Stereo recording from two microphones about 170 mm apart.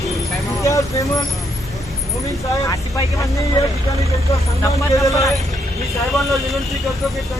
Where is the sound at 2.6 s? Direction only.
20° left (ahead or behind).